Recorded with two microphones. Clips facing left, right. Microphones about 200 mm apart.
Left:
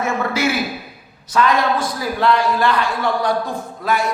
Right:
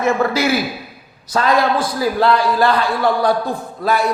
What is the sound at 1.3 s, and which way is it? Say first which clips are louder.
A man's voice: right 1 dB; 35° right (ahead or behind).